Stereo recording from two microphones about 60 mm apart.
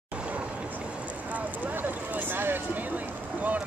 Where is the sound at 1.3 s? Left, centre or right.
Right.